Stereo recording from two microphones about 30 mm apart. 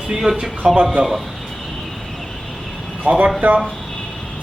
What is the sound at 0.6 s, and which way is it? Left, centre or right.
Speech, right.